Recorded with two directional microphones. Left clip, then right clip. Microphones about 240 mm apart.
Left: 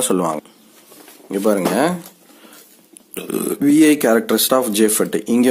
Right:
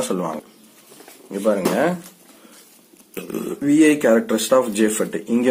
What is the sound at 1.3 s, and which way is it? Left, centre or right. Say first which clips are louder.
Speech: left 3 dB; left.